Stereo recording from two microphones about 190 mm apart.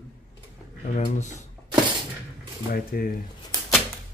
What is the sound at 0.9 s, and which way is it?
Speech, 40° left (ahead or behind).